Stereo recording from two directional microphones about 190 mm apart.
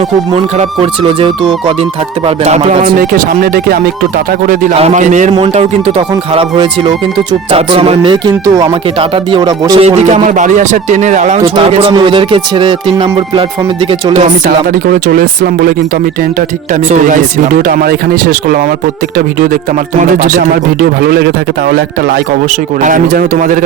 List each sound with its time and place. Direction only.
0.8 s speech: 30° right (ahead or behind)
4.7 s speech: 35° right (ahead or behind)
9.8 s speech: 35° right (ahead or behind)
11.7 s speech: 30° right (ahead or behind)
14.1 s speech: 40° right (ahead or behind)
15.0 s speech: 50° right (ahead or behind)
16.9 s speech: 45° right (ahead or behind)
20.0 s speech: 45° right (ahead or behind)
21.0 s speech: 55° right (ahead or behind)
22.8 s speech: 45° right (ahead or behind)